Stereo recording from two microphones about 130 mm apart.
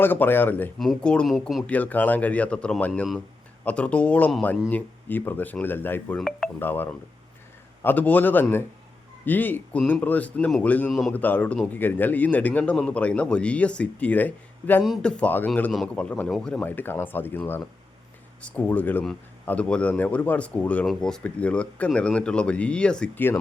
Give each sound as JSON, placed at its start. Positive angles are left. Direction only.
{"t": 0.0, "sound": "speech", "side_deg": 15}
{"t": 0.8, "sound": "speech", "side_deg": 5}
{"t": 1.6, "sound": "speech", "side_deg": 10}
{"t": 6.1, "sound": "speech", "side_deg": 0}
{"t": 6.6, "sound": "speech", "side_deg": 15}